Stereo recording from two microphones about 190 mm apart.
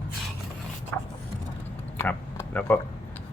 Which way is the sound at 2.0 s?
10° left (ahead or behind).